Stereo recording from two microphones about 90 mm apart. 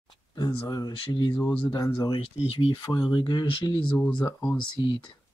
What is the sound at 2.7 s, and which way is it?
Speech, 55° left (ahead or behind).